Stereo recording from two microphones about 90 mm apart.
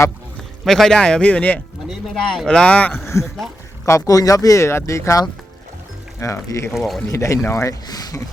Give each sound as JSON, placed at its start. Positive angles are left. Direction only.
{"t": 0.6, "sound": "speech", "side_deg": 5}
{"t": 1.9, "sound": "speech", "side_deg": 0}
{"t": 2.5, "sound": "speech", "side_deg": 10}
{"t": 3.8, "sound": "speech", "side_deg": 35}
{"t": 6.7, "sound": "speech", "side_deg": 0}
{"t": 7.1, "sound": "speech", "side_deg": 35}
{"t": 7.9, "sound": "speech", "side_deg": 45}